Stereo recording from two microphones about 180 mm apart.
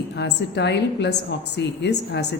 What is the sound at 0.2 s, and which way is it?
A woman's voice, 70° left (ahead or behind).